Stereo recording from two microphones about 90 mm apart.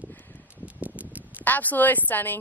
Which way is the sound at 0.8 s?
15° right (ahead or behind).